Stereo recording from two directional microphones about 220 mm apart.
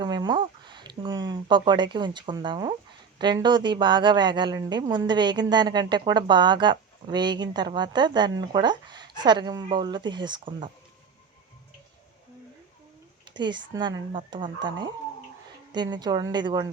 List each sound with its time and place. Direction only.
0.0 s a woman's voice: 20° right (ahead or behind)
13.3 s a woman's voice: 20° right (ahead or behind)